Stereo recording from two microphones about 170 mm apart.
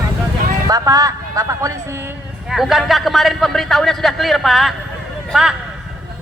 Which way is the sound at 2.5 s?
Centre (ahead or behind).